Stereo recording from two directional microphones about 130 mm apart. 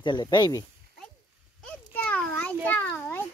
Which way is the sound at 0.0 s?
35° left (ahead or behind).